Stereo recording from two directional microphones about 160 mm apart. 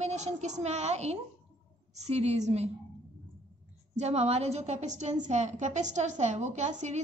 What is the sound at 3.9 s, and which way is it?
Speech, 45° right (ahead or behind).